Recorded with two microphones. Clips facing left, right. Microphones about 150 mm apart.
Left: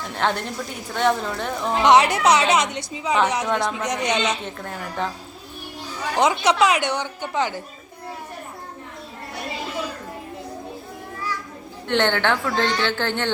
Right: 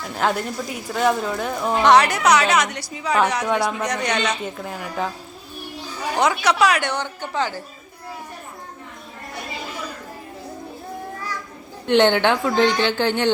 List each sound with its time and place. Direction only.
0.1 s speech: 5° right (ahead or behind)
1.8 s speech: 20° left (ahead or behind)
3.4 s a woman's voice: 10° right (ahead or behind)
3.8 s speech: 20° left (ahead or behind)
4.4 s speech: 5° right (ahead or behind)
6.1 s speech: 20° left (ahead or behind)
11.9 s a woman's voice: 15° right (ahead or behind)